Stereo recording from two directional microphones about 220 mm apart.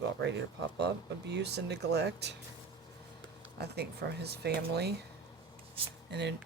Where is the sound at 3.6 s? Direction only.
50° right (ahead or behind).